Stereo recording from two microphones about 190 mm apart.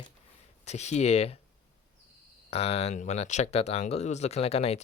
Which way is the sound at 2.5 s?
30° left (ahead or behind).